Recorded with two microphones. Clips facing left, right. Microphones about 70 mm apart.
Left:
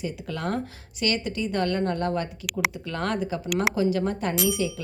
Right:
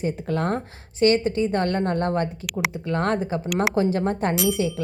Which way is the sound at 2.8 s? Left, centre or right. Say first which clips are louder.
Right 4 dB; right.